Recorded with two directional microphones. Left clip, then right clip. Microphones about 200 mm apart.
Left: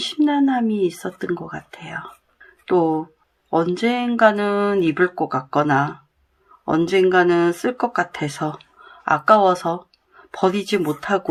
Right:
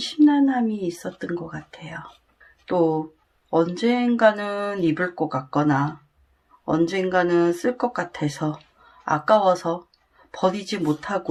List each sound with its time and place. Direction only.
0.0 s speech: 30° left (ahead or behind)